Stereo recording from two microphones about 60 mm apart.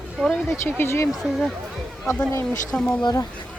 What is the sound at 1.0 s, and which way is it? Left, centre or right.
Speech, centre.